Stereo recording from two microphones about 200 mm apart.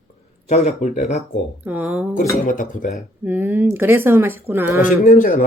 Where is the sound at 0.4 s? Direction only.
35° left (ahead or behind).